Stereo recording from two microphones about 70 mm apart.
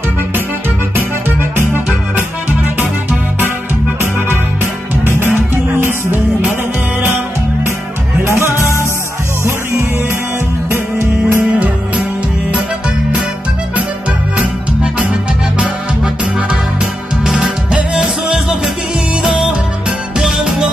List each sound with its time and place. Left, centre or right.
0.9 s music: right
5.8 s music: right
8.5 s music: left
10.7 s music: right
14.4 s music: centre
20.2 s music: centre